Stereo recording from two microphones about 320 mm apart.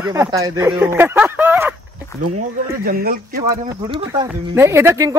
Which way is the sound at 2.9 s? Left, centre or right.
Right.